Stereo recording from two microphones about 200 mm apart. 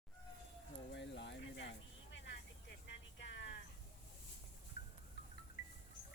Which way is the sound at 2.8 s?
60° left (ahead or behind).